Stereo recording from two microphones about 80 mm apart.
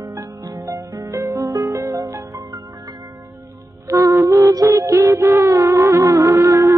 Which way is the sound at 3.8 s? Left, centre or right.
Right.